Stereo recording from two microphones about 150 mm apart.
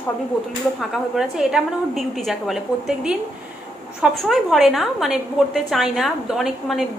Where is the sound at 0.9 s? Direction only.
Centre (ahead or behind).